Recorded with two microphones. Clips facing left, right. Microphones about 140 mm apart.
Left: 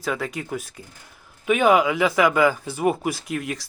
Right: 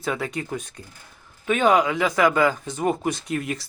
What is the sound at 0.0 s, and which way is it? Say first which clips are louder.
Speech: even; centre (ahead or behind).